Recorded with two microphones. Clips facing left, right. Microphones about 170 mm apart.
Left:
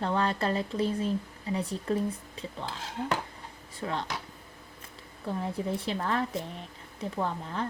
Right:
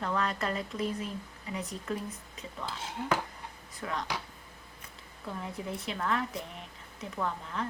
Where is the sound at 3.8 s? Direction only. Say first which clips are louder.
Left 3 dB; 30° left (ahead or behind).